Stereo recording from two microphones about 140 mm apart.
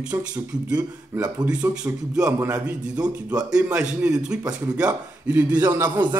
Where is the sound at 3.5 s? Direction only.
10° right (ahead or behind).